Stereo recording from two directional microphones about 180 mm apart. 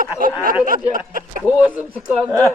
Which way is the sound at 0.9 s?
50° right (ahead or behind).